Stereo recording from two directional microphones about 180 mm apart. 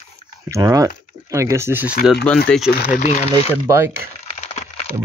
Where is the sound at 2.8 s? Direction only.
45° left (ahead or behind).